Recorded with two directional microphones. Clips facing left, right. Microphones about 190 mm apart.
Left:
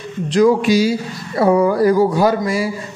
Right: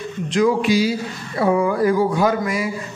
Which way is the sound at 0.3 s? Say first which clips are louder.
Left 4 dB; 40° left (ahead or behind).